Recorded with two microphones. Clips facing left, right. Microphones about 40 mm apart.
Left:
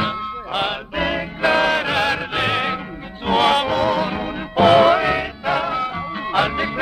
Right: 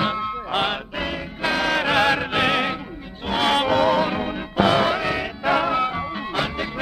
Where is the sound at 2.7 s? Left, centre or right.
Left.